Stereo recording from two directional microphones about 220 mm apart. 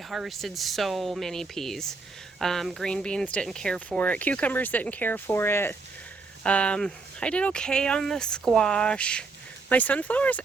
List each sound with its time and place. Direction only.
0.1 s speech: centre (ahead or behind)